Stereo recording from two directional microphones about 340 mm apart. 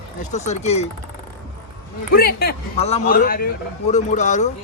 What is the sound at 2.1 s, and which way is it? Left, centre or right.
A man's voice, left.